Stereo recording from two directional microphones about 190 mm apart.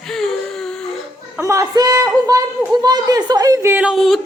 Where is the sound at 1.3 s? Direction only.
15° right (ahead or behind).